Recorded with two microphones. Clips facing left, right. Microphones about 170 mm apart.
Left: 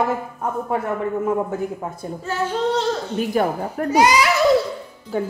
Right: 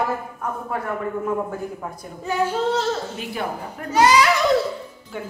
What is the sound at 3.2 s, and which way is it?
Speech, 45° left (ahead or behind).